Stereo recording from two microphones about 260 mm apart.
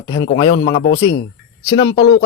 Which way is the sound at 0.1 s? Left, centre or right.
Left.